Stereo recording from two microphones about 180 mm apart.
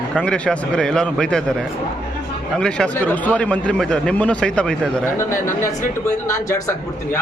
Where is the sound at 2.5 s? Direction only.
5° left (ahead or behind).